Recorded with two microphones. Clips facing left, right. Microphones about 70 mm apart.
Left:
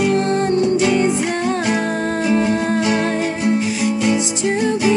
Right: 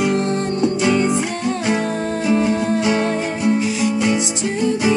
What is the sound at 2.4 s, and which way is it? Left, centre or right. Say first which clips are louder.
Music: even; left.